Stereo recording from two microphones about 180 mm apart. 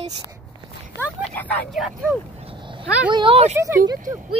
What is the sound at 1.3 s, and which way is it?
Speech, 10° left (ahead or behind).